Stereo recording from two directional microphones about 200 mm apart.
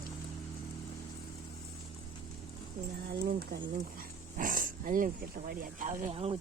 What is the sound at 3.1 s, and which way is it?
Speech, 50° right (ahead or behind).